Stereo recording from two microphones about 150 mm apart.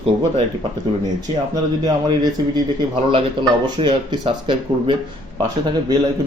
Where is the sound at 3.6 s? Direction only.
30° right (ahead or behind).